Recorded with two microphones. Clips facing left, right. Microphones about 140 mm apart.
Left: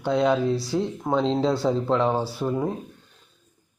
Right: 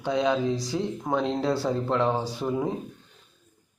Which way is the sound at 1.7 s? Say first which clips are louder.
Left 2 dB; 15° left (ahead or behind).